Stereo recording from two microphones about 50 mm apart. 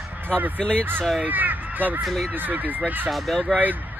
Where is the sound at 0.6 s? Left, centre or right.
Left.